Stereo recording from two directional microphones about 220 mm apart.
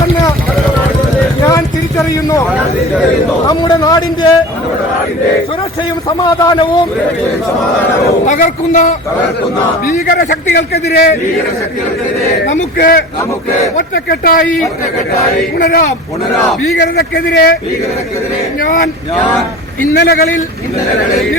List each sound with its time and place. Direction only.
1.5 s a sound: 15° left (ahead or behind)
3.4 s a man's voice: 20° left (ahead or behind)
6.1 s a man's voice: 20° left (ahead or behind)
8.0 s a man's voice: 35° left (ahead or behind)
12.5 s a man's voice: 40° left (ahead or behind)
14.4 s a man's voice: centre (ahead or behind)
15.5 s a man's voice: 40° left (ahead or behind)
20.0 s a man's voice: 45° left (ahead or behind)